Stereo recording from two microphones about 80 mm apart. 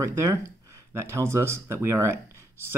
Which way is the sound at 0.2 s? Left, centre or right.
Right.